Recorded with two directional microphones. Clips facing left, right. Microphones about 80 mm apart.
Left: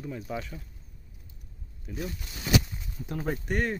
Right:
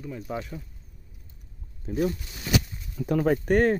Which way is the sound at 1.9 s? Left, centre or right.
Right.